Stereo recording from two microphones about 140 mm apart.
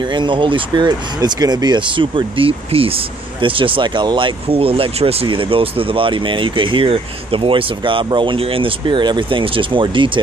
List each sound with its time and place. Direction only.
0.0 s speech: 35° right (ahead or behind)